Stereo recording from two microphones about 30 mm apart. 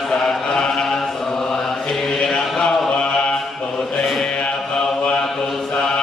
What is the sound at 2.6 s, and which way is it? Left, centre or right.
Mantra, left.